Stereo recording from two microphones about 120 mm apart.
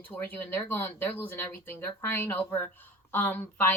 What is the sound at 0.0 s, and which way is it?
Speech, 15° left (ahead or behind).